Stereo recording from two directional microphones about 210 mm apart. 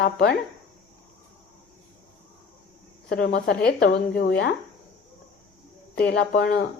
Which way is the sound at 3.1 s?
45° left (ahead or behind).